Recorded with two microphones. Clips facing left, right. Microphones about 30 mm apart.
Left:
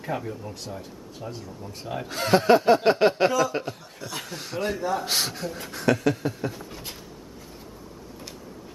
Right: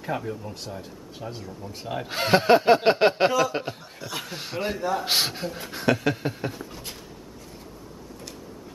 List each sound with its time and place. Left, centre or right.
0.0 s speech: centre
2.0 s speech: right
4.7 s speech: centre
5.0 s speech: right
6.5 s a sound: centre